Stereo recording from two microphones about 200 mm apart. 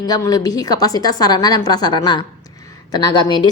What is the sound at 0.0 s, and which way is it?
A woman's voice, 20° left (ahead or behind).